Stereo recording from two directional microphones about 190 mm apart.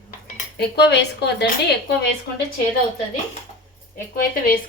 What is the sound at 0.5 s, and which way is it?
Speech, 60° left (ahead or behind).